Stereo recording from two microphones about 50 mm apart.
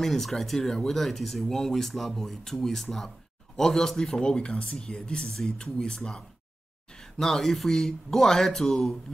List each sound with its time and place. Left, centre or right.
0.0 s speech: centre